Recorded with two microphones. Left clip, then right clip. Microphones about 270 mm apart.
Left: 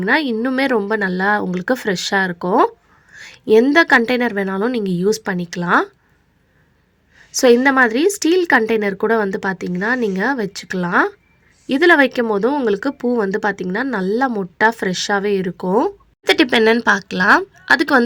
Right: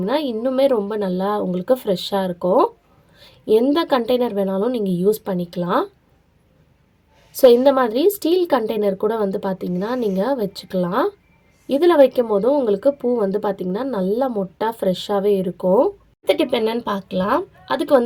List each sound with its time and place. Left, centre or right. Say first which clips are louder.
0.0 s speech: left 4 dB; left
3.2 s a sound: left 4 dB; left
3.8 s speech: left 5 dB; left
7.6 s speech: left 1 dB; left
16.5 s speech: left 7 dB; left
16.9 s speech: left 7 dB; left